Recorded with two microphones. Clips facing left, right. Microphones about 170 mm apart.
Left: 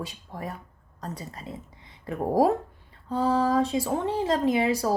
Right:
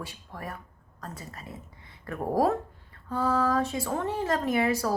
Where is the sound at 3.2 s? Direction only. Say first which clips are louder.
Left 2 dB; 30° left (ahead or behind).